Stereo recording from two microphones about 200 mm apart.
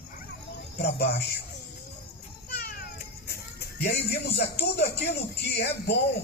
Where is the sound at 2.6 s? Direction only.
50° left (ahead or behind).